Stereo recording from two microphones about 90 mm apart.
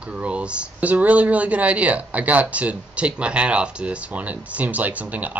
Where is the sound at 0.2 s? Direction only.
10° right (ahead or behind).